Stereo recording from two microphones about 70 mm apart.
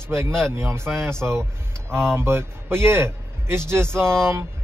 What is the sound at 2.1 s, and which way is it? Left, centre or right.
A man's voice, right.